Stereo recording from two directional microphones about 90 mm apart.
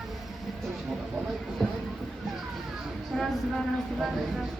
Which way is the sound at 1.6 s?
5° left (ahead or behind).